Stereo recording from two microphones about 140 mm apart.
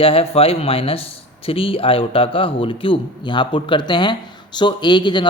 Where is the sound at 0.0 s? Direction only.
40° left (ahead or behind).